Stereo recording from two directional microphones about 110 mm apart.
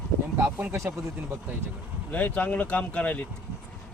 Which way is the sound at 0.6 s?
20° right (ahead or behind).